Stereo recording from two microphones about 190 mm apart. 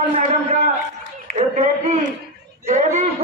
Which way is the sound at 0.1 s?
40° right (ahead or behind).